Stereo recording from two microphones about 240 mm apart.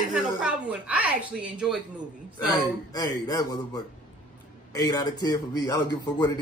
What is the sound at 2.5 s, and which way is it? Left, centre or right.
A man's voice, centre.